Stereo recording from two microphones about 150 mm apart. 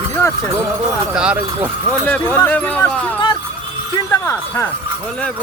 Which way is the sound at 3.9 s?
20° left (ahead or behind).